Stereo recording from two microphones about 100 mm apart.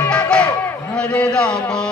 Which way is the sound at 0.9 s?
10° left (ahead or behind).